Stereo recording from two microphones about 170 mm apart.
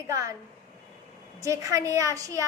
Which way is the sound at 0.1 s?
20° right (ahead or behind).